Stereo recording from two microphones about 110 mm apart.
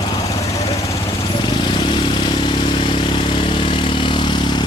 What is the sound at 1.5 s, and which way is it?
Vehicle, 45° left (ahead or behind).